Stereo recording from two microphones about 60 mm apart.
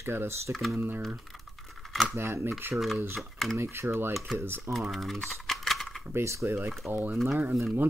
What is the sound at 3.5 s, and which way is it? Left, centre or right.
Speech, right.